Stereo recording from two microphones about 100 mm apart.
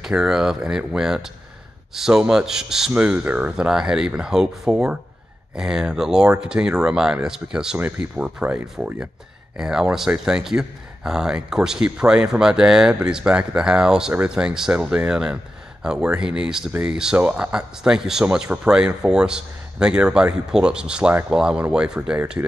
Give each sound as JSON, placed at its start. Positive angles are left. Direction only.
{"t": 0.0, "sound": "speech", "side_deg": -5}
{"t": 9.6, "sound": "speech", "side_deg": -5}
{"t": 21.1, "sound": "speech", "side_deg": -20}
{"t": 21.4, "sound": "speech", "side_deg": -5}